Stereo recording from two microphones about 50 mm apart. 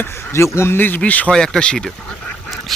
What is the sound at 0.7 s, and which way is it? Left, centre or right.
Speech, left.